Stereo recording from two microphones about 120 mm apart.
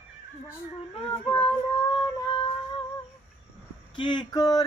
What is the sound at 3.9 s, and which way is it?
Speech, 40° left (ahead or behind).